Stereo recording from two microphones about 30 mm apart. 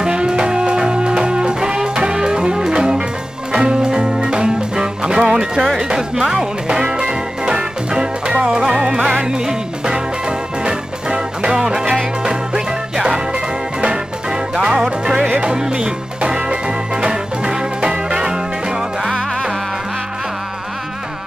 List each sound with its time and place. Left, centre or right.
0.0 s music: right
5.8 s speech: right
6.3 s music: right